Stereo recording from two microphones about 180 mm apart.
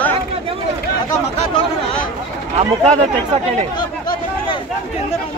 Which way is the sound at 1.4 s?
30° left (ahead or behind).